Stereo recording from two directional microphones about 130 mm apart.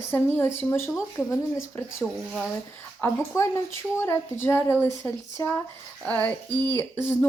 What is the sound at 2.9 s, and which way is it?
A woman's voice, 20° left (ahead or behind).